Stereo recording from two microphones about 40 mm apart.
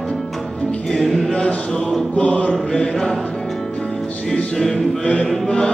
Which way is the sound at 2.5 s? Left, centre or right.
Centre.